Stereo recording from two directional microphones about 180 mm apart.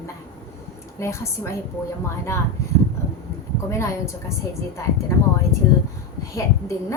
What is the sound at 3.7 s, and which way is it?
Speech, 15° left (ahead or behind).